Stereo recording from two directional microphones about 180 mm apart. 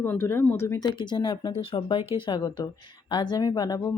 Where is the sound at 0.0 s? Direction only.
10° left (ahead or behind).